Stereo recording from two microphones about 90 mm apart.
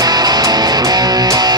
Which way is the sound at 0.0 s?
50° right (ahead or behind).